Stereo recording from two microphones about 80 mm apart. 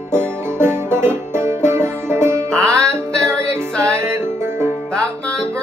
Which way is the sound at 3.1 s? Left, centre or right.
Centre.